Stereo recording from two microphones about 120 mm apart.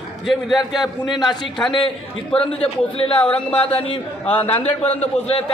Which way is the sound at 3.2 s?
10° left (ahead or behind).